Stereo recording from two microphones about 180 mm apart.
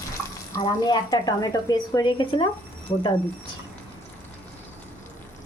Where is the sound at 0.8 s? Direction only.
20° left (ahead or behind).